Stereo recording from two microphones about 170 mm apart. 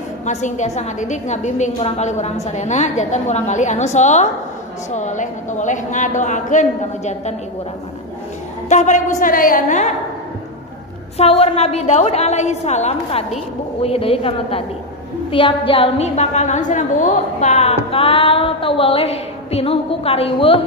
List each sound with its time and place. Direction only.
0.2 s a woman's voice: 45° left (ahead or behind)
8.6 s a woman's voice: 45° left (ahead or behind)
11.1 s a woman's voice: 35° left (ahead or behind)